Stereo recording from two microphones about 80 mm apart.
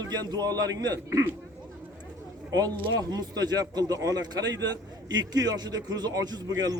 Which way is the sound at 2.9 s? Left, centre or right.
Right.